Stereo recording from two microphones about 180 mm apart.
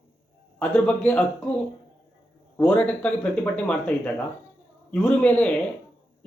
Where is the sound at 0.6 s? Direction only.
10° left (ahead or behind).